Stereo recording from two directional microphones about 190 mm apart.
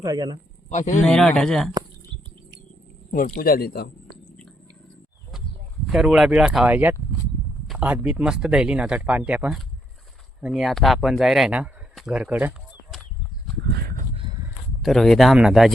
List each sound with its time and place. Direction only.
0.0 s a man's voice: 20° right (ahead or behind)
0.7 s speech: 40° left (ahead or behind)
1.0 s speech: 5° left (ahead or behind)
3.1 s speech: 45° left (ahead or behind)
4.3 s cat: 5° left (ahead or behind)
5.8 s speech: centre (ahead or behind)
14.8 s speech: centre (ahead or behind)